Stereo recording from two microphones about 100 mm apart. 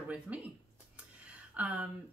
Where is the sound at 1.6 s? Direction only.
15° right (ahead or behind).